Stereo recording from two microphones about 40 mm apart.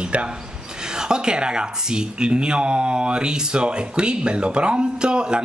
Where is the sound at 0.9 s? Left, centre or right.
Centre.